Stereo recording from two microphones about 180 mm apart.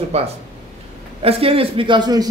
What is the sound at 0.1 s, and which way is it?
A man's voice, 35° right (ahead or behind).